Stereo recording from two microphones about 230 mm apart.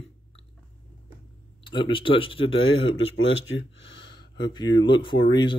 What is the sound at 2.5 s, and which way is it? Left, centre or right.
Speech, left.